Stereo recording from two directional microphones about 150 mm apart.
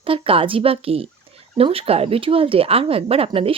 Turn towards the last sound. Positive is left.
turn(degrees=-40)  # may be behind; listen again after turning